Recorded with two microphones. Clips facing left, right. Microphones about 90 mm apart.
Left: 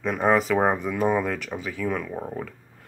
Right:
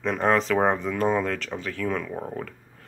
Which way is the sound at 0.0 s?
5° left (ahead or behind).